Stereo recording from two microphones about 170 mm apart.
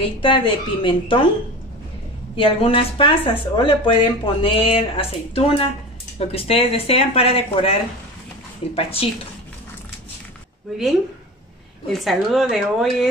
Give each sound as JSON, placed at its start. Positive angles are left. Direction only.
{"t": 0.2, "sound": "speech", "side_deg": 30}
{"t": 2.3, "sound": "speech", "side_deg": 30}
{"t": 11.9, "sound": "speech", "side_deg": 0}